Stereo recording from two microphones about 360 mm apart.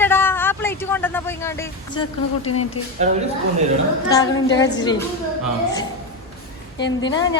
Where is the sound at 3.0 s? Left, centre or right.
Centre.